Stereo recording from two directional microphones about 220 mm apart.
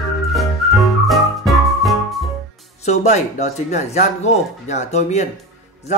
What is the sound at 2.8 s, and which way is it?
A man's voice, 30° left (ahead or behind).